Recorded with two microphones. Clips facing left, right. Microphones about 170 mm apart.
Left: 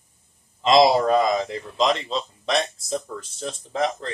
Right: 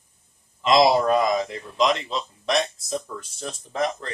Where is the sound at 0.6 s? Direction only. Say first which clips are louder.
Left 1 dB; 25° left (ahead or behind).